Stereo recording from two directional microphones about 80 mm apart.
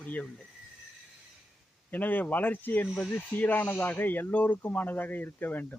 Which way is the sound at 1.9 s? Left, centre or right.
Left.